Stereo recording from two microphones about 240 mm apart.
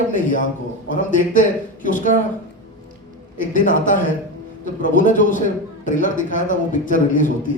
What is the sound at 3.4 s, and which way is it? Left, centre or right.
Speech, left.